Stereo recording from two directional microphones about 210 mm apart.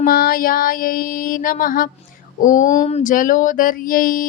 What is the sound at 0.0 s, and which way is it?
Child singing, 45° left (ahead or behind).